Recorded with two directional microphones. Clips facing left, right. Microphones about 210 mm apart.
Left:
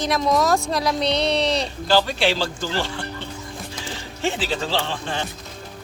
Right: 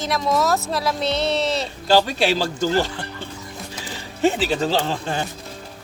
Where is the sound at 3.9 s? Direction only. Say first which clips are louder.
Right 6 dB; 40° right (ahead or behind).